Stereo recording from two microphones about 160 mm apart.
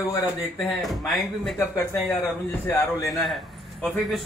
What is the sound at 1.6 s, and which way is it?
Speech, 15° left (ahead or behind).